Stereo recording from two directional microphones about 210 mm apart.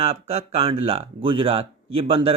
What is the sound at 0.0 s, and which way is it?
Speech, 30° right (ahead or behind).